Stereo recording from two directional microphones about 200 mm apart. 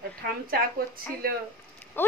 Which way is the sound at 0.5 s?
50° right (ahead or behind).